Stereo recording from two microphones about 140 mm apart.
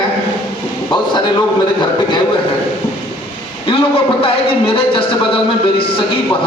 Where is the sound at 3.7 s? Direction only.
40° left (ahead or behind).